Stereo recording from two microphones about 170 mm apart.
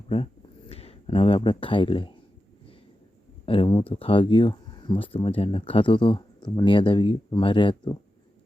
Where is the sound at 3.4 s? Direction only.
30° left (ahead or behind).